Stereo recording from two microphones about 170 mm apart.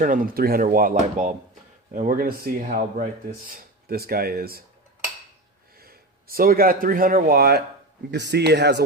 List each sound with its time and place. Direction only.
0.0 s speech: 55° right (ahead or behind)
5.8 s speech: 60° right (ahead or behind)
8.1 s speech: 80° right